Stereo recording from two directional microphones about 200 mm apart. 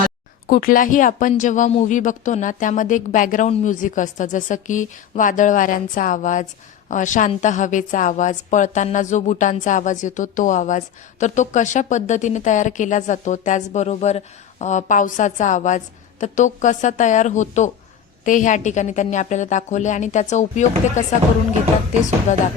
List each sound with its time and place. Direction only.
0.4 s speech: 45° left (ahead or behind)
22.3 s speech: 35° left (ahead or behind)